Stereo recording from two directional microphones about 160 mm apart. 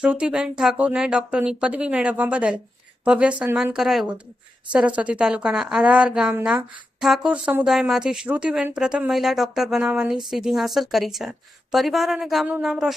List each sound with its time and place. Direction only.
0.0 s a woman's voice: 5° right (ahead or behind)